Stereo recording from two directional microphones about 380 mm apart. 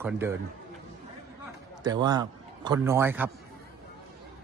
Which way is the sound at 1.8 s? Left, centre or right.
Centre.